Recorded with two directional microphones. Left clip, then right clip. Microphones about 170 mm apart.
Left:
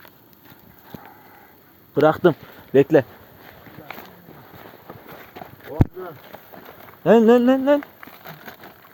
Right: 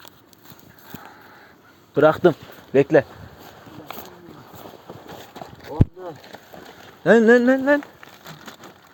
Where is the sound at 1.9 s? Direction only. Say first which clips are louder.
Right 1 dB; centre (ahead or behind).